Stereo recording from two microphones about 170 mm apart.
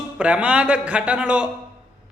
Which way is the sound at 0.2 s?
5° right (ahead or behind).